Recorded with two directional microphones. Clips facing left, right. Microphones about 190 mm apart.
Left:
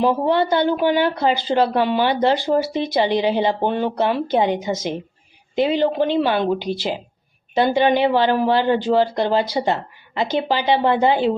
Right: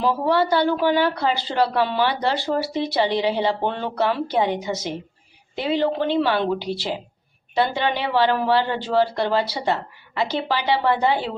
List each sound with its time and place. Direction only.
0.0 s speech: 20° left (ahead or behind)